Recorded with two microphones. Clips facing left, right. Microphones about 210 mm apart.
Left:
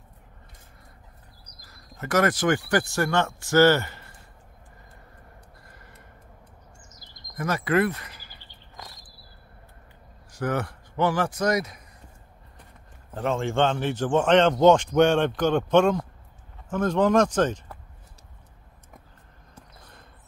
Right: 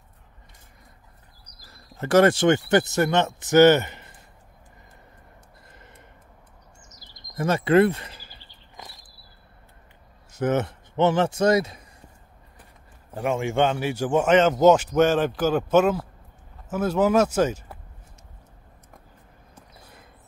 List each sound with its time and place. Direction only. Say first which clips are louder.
1.7 s speech: right 6 dB; 30° right (ahead or behind)
5.7 s gasp: right 1 dB; 20° right (ahead or behind)
7.3 s speech: right 5 dB; 25° right (ahead or behind)
10.3 s a man's voice: right 4 dB; 20° right (ahead or behind)
13.1 s speech: right 1 dB; 10° right (ahead or behind)
19.8 s a sound: right 2 dB; 5° right (ahead or behind)